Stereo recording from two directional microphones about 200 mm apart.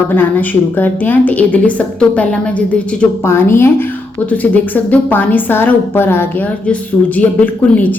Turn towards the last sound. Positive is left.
turn(degrees=10)  # may be behind; listen again after turning